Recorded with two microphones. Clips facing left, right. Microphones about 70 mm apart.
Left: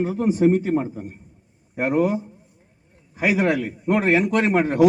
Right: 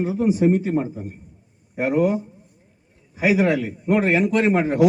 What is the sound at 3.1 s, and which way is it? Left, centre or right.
A man's voice, left.